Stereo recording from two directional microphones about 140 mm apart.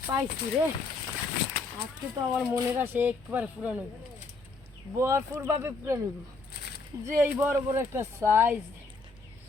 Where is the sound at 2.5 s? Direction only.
15° right (ahead or behind).